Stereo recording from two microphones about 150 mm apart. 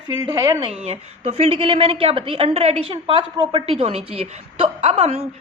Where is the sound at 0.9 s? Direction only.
45° right (ahead or behind).